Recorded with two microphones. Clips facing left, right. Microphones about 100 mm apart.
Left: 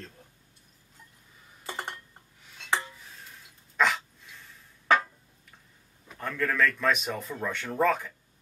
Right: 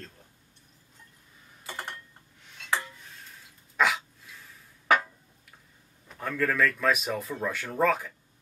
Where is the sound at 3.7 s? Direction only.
5° right (ahead or behind).